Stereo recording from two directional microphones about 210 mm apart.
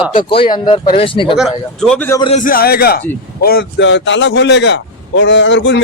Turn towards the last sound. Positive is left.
turn(degrees=55)  # may be behind; listen again after turning